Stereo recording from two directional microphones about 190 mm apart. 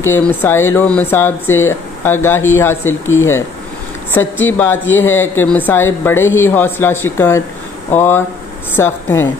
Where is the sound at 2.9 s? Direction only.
90° left.